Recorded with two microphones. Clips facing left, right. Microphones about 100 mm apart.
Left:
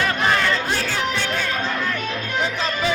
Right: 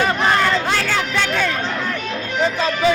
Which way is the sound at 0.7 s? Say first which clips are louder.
Right 4 dB; 85° right.